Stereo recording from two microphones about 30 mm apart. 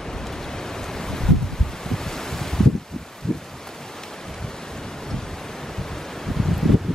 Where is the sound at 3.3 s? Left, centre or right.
Centre.